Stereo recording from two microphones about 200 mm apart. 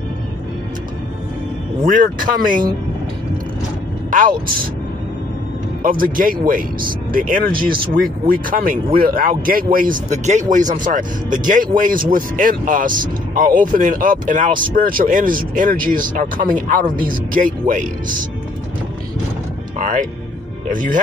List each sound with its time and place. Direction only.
1.9 s speech: 45° right (ahead or behind)
4.1 s speech: 40° right (ahead or behind)
5.8 s speech: 45° right (ahead or behind)
19.8 s speech: 40° right (ahead or behind)